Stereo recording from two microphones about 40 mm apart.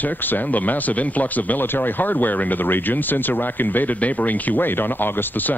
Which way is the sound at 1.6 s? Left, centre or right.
Left.